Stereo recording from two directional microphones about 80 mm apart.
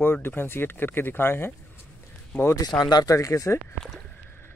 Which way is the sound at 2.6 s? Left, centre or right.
Left.